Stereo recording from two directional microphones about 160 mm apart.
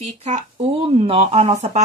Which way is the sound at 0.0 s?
40° right (ahead or behind).